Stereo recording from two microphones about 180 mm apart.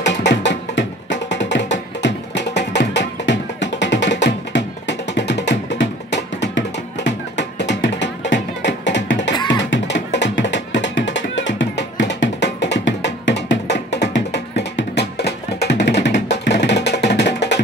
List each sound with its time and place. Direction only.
0.0 s music: 75° left (ahead or behind)